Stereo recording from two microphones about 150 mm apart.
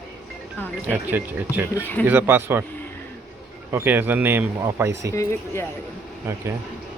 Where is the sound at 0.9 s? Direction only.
15° right (ahead or behind).